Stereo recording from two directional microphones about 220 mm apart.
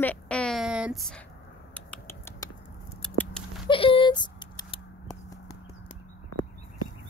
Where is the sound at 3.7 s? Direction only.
25° left (ahead or behind).